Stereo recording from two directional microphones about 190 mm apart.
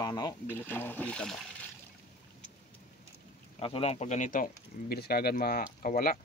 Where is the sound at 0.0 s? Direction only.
20° left (ahead or behind); by 1.4 s 5° left (ahead or behind).